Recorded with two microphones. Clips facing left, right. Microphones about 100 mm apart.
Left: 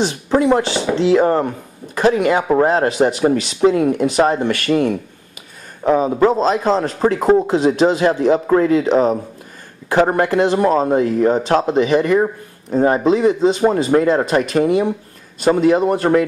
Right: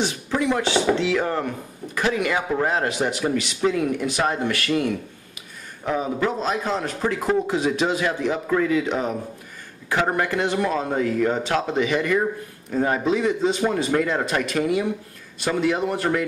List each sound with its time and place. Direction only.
0.3 s a man's voice: 40° left (ahead or behind)